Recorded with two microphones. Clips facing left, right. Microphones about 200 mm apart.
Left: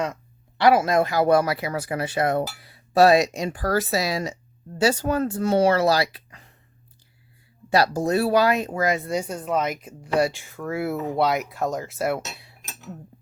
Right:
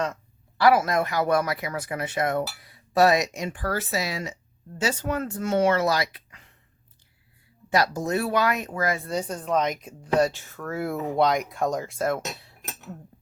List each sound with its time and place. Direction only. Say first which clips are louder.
0.6 s speech: left 2 dB; 25° left (ahead or behind)
7.7 s speech: left 3 dB; 30° left (ahead or behind)
9.0 s speech: left 2 dB; 10° left (ahead or behind)
10.9 s speech: left 1 dB; 15° right (ahead or behind)
11.2 s speech: right 1 dB; 5° left (ahead or behind)